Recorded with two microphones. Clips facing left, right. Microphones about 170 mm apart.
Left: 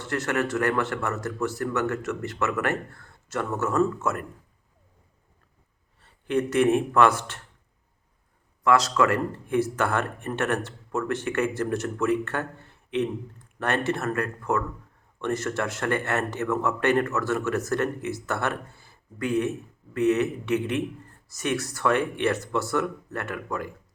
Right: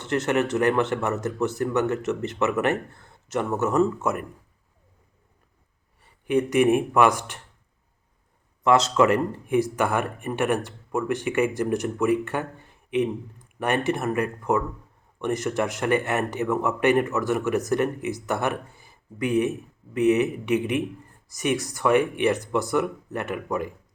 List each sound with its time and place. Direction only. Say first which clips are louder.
0.0 s speech: right 3 dB; 20° right (ahead or behind)
6.0 s speech: right 3 dB; 15° right (ahead or behind)
8.6 s a man's voice: right 2 dB; 20° right (ahead or behind)